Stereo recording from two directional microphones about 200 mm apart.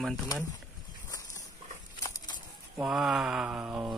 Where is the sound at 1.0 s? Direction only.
15° left (ahead or behind).